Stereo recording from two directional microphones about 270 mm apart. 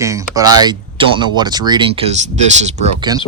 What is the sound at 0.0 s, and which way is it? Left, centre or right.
Speech, centre.